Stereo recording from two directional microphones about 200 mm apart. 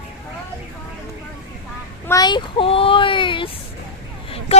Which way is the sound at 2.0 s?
20° left (ahead or behind).